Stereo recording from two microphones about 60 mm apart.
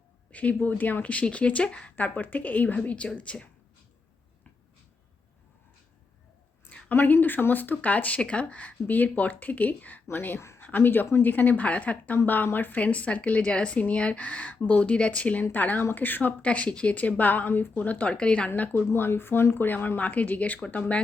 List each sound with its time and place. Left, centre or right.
0.3 s speech: left
2.0 s speech: left
6.7 s a sound: left
6.9 s speech: left
18.9 s speech: left